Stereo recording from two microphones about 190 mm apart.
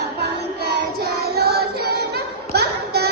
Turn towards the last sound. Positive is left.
turn(degrees=-55)  # may be behind; listen again after turning